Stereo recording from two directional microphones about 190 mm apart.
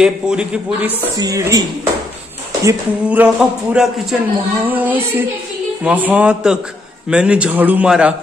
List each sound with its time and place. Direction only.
0.0 s speech: 5° right (ahead or behind)
1.1 s a woman's voice: 20° right (ahead or behind)
2.6 s speech: 10° right (ahead or behind)